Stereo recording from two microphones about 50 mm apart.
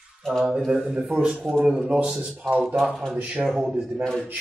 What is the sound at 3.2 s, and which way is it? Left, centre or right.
Speech, right.